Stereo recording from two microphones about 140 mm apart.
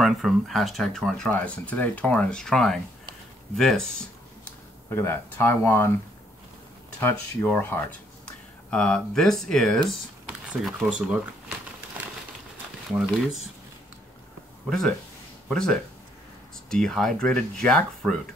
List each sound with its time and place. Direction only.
0.0 s speech: centre (ahead or behind)
4.8 s speech: 20° left (ahead or behind)
7.0 s speech: 15° left (ahead or behind)
10.4 s speech: 10° right (ahead or behind)
15.4 s speech: 5° left (ahead or behind)